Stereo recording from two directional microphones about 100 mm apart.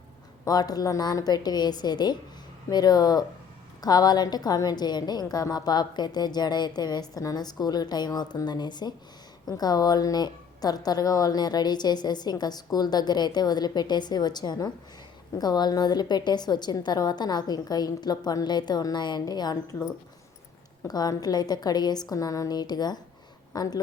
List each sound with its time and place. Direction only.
0.4 s a woman's voice: 40° left (ahead or behind)
20.8 s a woman's voice: 40° left (ahead or behind)